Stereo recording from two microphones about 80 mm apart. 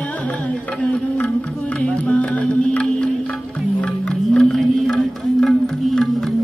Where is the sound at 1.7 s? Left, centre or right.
Centre.